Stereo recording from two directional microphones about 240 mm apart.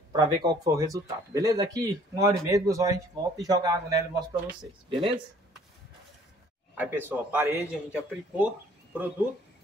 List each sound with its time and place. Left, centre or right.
0.1 s speech: centre
6.7 s speech: centre